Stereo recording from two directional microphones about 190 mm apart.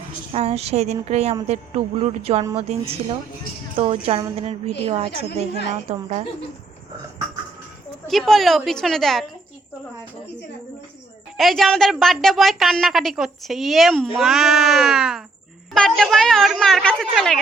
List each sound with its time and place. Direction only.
0.3 s a woman's voice: 30° right (ahead or behind)
5.3 s a woman's voice: 60° left (ahead or behind)
5.7 s a woman's voice: 35° right (ahead or behind)
8.0 s a woman's voice: centre (ahead or behind)
11.3 s a woman's voice: centre (ahead or behind)